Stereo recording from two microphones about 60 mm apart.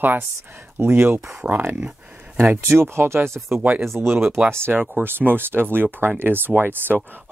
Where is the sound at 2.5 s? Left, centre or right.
Right.